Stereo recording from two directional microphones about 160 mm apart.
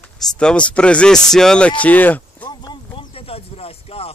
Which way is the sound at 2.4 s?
30° left (ahead or behind).